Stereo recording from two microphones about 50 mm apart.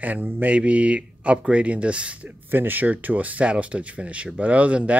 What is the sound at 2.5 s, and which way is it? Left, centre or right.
Speech, right.